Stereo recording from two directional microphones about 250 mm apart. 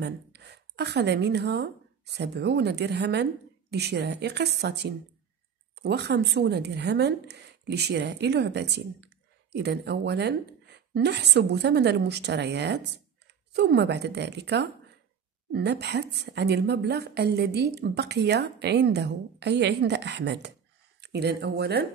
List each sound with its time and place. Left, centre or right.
0.0 s a woman's voice: right